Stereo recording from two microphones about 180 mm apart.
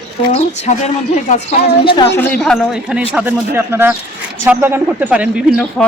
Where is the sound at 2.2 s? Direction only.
10° left (ahead or behind); by 5.2 s 10° right (ahead or behind).